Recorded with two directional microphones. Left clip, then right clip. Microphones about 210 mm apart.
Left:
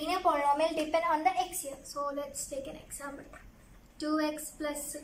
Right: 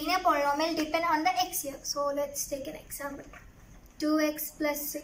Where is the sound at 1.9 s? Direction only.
5° left (ahead or behind).